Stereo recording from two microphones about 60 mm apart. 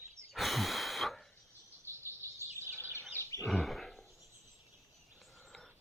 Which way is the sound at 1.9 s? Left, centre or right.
Left.